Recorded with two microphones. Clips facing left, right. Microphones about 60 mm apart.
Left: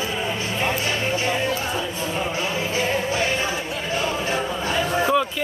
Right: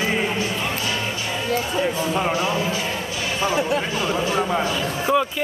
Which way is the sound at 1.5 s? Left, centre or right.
Right.